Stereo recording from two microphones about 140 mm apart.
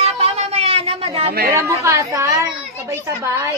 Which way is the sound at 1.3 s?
90° right.